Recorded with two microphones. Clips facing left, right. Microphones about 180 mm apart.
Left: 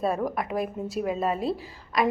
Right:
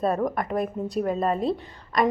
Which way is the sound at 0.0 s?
5° left (ahead or behind).